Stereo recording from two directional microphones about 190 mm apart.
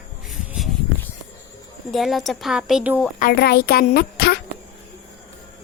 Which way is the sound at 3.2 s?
55° left (ahead or behind).